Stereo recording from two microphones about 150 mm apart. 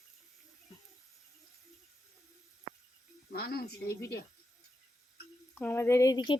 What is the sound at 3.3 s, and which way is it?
Speech, 90° left.